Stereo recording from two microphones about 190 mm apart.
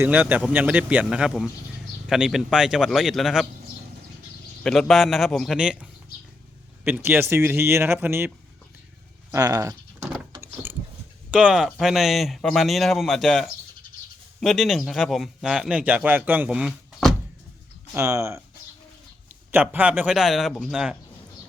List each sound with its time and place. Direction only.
0.0 s a man's voice: 10° right (ahead or behind)
4.6 s a man's voice: centre (ahead or behind)
9.3 s speech: 20° right (ahead or behind)
10.4 s gears: 10° right (ahead or behind)
11.3 s a man's voice: 5° right (ahead or behind)
17.9 s speech: 15° right (ahead or behind)
19.5 s a man's voice: 10° right (ahead or behind)